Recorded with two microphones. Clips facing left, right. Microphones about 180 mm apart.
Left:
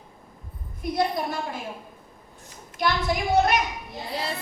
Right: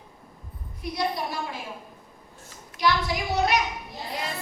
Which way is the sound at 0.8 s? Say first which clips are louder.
Left 3 dB; 50° left (ahead or behind).